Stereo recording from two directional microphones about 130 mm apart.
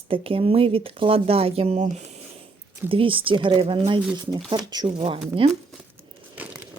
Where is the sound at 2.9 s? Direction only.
45° right (ahead or behind).